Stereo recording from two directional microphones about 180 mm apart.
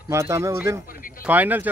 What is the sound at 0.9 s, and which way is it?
Speech, 50° left (ahead or behind).